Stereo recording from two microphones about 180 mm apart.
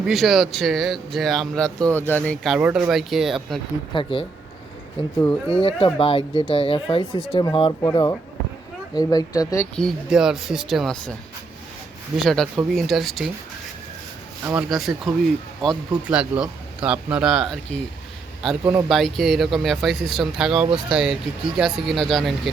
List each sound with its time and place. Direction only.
0.0 s speech: centre (ahead or behind)
3.9 s speech: 30° left (ahead or behind)
5.2 s speech: 5° left (ahead or behind)
5.5 s speech: 30° left (ahead or behind)
9.7 s speech: centre (ahead or behind)
12.1 s speech: centre (ahead or behind)
14.4 s speech: 5° right (ahead or behind)
18.6 s speech: 15° right (ahead or behind)
18.9 s speech: centre (ahead or behind)